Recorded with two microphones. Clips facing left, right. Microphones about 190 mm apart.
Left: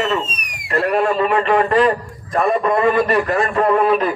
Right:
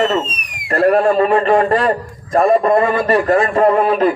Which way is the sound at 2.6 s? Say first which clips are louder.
Right 2 dB; 45° right (ahead or behind).